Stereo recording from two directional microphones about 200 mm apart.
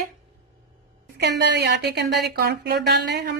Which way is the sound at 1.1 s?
55° right (ahead or behind).